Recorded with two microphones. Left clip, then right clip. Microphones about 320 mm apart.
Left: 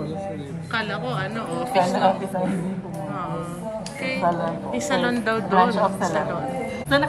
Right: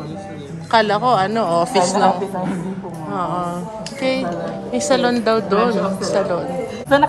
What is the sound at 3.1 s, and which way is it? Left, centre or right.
A woman's voice, centre.